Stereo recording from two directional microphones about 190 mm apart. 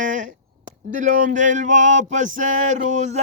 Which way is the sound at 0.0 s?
40° right (ahead or behind).